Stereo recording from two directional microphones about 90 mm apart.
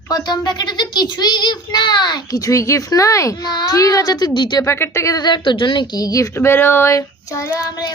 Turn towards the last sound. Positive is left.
turn(degrees=35)  # may be behind; listen again after turning